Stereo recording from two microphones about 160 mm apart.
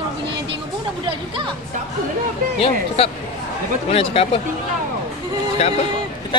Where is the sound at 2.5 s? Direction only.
35° left (ahead or behind).